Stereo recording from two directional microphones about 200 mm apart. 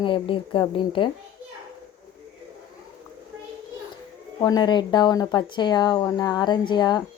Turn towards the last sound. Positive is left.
turn(degrees=20)  # may be behind; listen again after turning